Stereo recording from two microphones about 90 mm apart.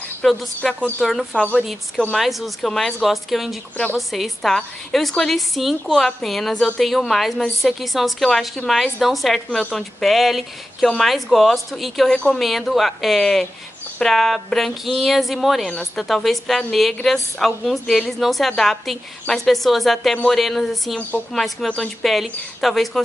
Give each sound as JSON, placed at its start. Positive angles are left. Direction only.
{"t": 0.2, "sound": "speech", "side_deg": 0}
{"t": 0.7, "sound": "speech", "side_deg": 15}
{"t": 1.0, "sound": "a woman's voice", "side_deg": 5}
{"t": 1.5, "sound": "a woman's voice", "side_deg": -5}